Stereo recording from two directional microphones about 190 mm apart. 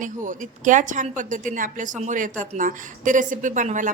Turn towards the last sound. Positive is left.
turn(degrees=-40)  # may be behind; listen again after turning